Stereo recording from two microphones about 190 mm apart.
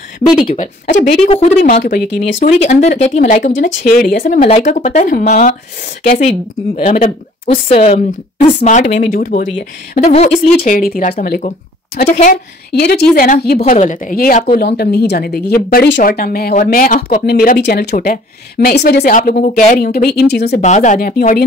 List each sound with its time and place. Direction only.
0.6 s speech: 40° left (ahead or behind)
2.4 s speech: 35° left (ahead or behind)
6.8 s speech: 40° left (ahead or behind)
7.7 s speech: 35° left (ahead or behind); by 9.5 s 50° left (ahead or behind)
9.9 s speech: 35° left (ahead or behind)
12.7 s speech: 55° left (ahead or behind)
13.6 s speech: 40° left (ahead or behind); by 20.6 s 60° left (ahead or behind)
20.6 s speech: 40° left (ahead or behind)